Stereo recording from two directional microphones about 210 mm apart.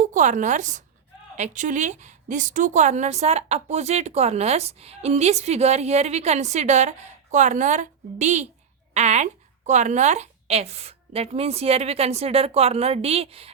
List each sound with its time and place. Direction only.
0.0 s a woman's voice: 35° right (ahead or behind)